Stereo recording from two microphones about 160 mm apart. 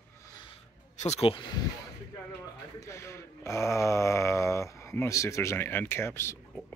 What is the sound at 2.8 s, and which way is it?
Speech, 20° left (ahead or behind).